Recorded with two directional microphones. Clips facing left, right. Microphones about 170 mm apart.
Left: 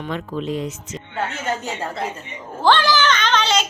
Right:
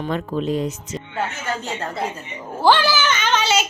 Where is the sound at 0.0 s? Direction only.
40° right (ahead or behind).